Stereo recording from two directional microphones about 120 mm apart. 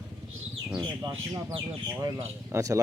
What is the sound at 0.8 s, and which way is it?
Speech, 30° right (ahead or behind).